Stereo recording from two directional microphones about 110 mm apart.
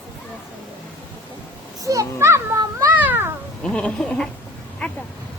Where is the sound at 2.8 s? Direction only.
15° right (ahead or behind).